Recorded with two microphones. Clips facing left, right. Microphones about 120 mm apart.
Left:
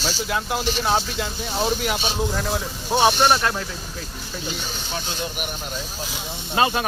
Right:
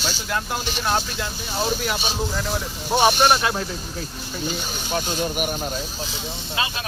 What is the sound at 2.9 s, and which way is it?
Speech, 15° right (ahead or behind).